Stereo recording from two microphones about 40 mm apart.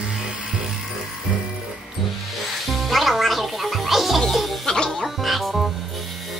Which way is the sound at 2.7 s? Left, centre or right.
Centre.